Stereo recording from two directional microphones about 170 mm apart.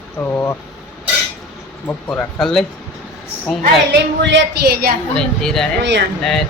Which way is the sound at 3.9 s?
80° right.